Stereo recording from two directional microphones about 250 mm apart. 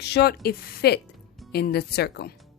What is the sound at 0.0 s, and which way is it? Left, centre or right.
A woman's voice, left.